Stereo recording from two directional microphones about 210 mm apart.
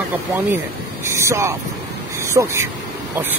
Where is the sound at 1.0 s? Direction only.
15° right (ahead or behind).